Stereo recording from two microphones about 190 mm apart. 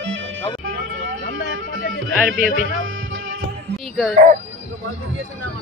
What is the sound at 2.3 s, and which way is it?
Speech, 45° right (ahead or behind).